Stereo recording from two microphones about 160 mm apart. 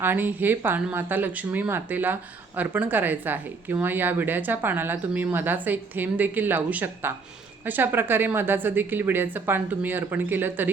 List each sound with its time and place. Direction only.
0.0 s speech: 10° right (ahead or behind)